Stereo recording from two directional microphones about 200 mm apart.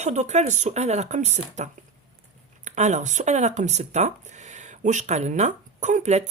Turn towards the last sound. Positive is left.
turn(degrees=-35)  # may be behind; listen again after turning